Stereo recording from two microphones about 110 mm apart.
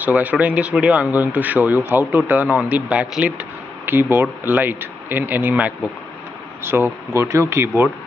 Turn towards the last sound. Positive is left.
turn(degrees=-20)  # may be behind; listen again after turning